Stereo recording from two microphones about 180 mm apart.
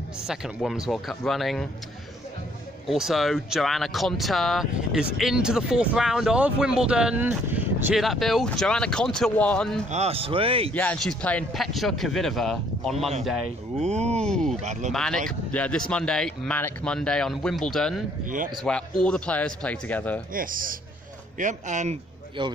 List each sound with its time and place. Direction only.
0.3 s speech: centre (ahead or behind)
2.9 s speech: centre (ahead or behind)
9.8 s a man's voice: 35° right (ahead or behind)
10.7 s speech: 10° left (ahead or behind)
13.7 s a man's voice: 40° right (ahead or behind)
14.2 s speech: 5° left (ahead or behind)
14.6 s a man's voice: 40° right (ahead or behind)
14.9 s speech: 5° left (ahead or behind)
20.3 s speech: 50° right (ahead or behind)
22.4 s a man's voice: 25° right (ahead or behind)